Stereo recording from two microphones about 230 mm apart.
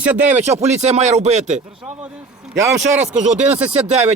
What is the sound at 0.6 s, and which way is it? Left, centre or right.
Speech, right.